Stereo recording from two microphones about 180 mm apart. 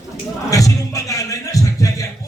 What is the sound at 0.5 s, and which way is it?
Music, 20° left (ahead or behind).